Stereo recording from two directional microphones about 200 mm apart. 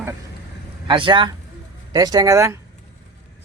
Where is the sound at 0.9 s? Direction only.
25° right (ahead or behind).